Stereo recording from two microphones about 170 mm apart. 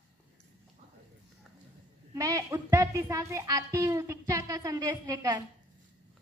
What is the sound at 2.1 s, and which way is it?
A child's voice, 20° right (ahead or behind).